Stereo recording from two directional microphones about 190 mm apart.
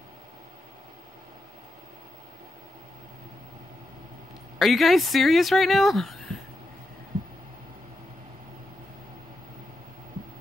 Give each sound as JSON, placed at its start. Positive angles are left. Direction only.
{"t": 4.6, "sound": "speech", "side_deg": 0}